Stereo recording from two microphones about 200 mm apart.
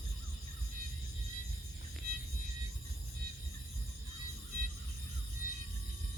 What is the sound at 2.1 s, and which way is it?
Music, 50° right (ahead or behind).